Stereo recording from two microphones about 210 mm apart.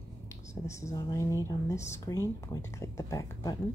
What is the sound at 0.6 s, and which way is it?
A woman's voice, 15° left (ahead or behind).